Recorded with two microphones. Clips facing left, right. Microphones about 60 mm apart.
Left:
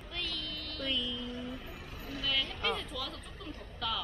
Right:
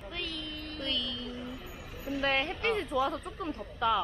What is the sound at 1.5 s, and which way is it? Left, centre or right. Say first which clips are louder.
Music: right 1 dB; centre.